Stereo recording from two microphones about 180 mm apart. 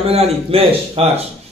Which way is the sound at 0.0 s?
35° right (ahead or behind).